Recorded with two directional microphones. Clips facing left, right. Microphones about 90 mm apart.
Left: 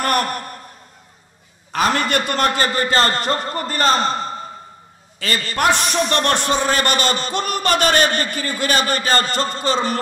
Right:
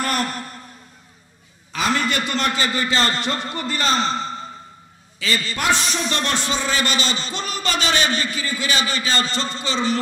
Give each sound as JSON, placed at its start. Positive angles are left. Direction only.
{"t": 0.0, "sound": "a man's voice", "side_deg": 55}
{"t": 1.7, "sound": "a man's voice", "side_deg": 50}